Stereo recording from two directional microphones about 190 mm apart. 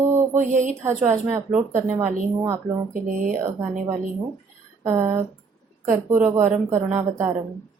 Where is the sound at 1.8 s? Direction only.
10° right (ahead or behind).